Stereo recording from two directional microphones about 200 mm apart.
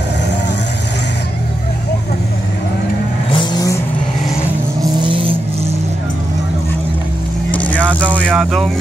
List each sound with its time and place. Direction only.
3.3 s vehicle: 20° left (ahead or behind)
5.0 s vehicle: 25° right (ahead or behind)
7.5 s vehicle: 5° left (ahead or behind)
8.0 s vehicle: 5° right (ahead or behind)